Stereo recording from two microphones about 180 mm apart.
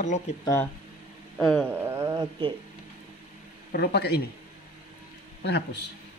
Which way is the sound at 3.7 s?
65° left (ahead or behind).